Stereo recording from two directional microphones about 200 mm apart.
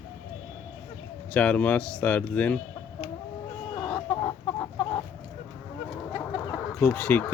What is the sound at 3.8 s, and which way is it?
Chicken, 20° left (ahead or behind).